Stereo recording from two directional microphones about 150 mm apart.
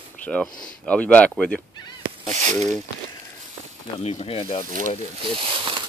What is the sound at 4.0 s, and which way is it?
Speech, 45° left (ahead or behind).